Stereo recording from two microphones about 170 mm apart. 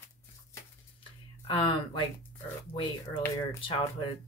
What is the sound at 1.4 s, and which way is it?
Speech, 30° left (ahead or behind).